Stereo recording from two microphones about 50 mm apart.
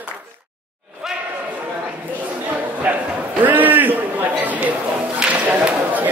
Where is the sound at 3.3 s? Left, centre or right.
Right.